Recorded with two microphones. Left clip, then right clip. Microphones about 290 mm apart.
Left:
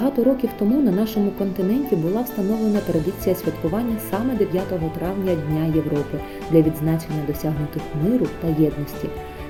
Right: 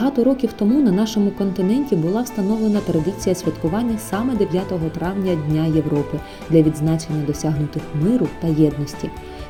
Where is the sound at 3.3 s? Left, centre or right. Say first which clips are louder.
Even; right.